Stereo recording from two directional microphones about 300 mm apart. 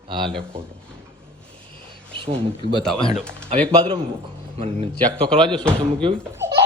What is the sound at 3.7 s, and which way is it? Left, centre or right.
A man's voice, centre.